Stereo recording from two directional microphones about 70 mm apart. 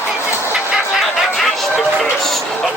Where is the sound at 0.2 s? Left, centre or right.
Left.